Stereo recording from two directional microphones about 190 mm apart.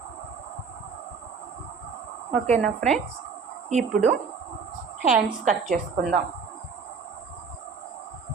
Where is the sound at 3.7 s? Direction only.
35° right (ahead or behind).